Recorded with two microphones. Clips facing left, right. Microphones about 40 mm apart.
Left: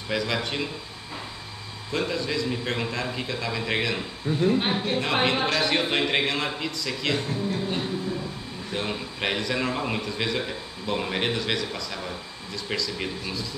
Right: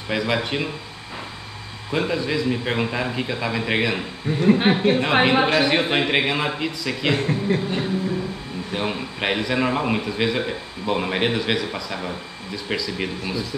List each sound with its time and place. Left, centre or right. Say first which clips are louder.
0.1 s a man's voice: right 4 dB; centre
1.9 s a man's voice: right 5 dB; centre
4.5 s speech: right 8 dB; right
4.9 s a man's voice: right 6 dB; centre
7.2 s speech: right 6 dB; right
8.7 s a man's voice: right 4 dB; centre